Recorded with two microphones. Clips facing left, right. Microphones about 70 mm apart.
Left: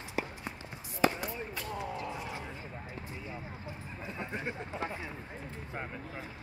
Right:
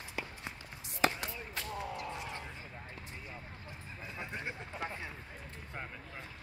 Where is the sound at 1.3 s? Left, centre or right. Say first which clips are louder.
Left 3 dB; left.